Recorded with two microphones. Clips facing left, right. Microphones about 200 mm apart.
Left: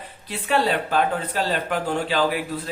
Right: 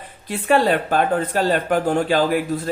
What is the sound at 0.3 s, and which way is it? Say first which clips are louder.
A man's voice: right 5 dB; 50° right (ahead or behind).